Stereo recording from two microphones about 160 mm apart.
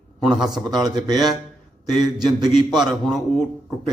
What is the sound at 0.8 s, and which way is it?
Speech, 25° right (ahead or behind).